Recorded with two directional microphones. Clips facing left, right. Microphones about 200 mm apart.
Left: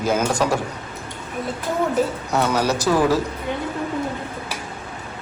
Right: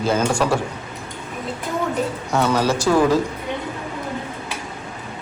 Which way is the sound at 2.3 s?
10° left (ahead or behind).